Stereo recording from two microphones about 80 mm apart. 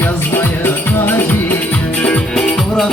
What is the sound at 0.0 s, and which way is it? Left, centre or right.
Music, left.